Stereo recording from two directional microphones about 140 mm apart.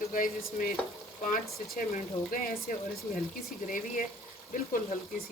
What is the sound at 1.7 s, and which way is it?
Speech, 90° left.